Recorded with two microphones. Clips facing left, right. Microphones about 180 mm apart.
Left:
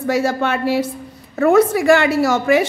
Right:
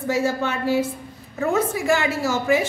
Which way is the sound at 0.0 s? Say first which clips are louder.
Left 4 dB; 75° left (ahead or behind).